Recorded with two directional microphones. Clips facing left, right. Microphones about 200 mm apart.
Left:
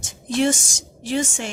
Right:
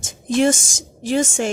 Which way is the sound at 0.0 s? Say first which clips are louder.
Right 3 dB; 45° right (ahead or behind).